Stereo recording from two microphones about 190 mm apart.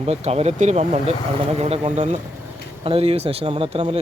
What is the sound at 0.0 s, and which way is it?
Speech, 35° right (ahead or behind).